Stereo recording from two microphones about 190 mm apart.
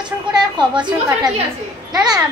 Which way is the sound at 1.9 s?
20° right (ahead or behind).